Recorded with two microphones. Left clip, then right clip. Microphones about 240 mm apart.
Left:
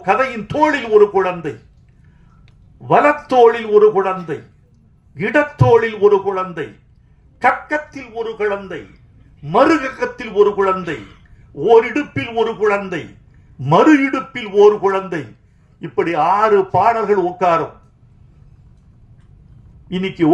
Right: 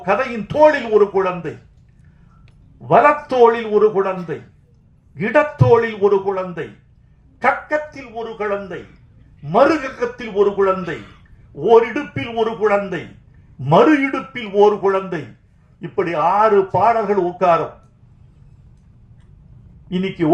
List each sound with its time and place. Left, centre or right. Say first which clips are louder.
0.0 s a man's voice: left 3 dB; left
2.8 s a man's voice: even; left
19.9 s a man's voice: left 1 dB; left